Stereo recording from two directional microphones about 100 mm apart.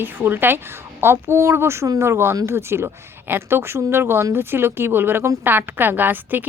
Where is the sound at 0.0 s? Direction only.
20° right (ahead or behind).